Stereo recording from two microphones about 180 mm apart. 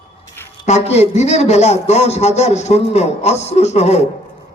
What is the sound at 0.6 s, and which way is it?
A man's voice, 35° left (ahead or behind).